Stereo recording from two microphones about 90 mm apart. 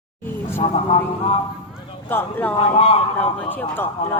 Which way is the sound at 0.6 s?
90° left.